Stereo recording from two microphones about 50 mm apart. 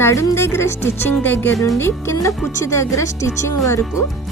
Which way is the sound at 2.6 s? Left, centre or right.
Left.